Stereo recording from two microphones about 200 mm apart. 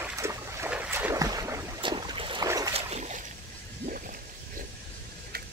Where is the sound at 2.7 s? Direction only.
35° right (ahead or behind).